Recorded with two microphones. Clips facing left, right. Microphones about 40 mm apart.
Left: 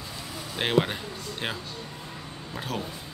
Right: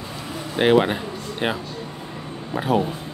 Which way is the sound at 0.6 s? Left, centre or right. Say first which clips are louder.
Right 8 dB; centre.